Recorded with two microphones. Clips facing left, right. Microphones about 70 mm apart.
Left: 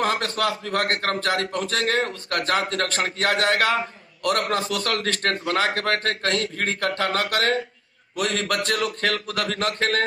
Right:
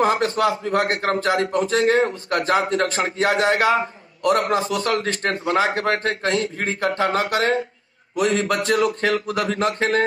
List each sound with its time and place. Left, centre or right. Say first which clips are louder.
0.0 s speech: right 5 dB; centre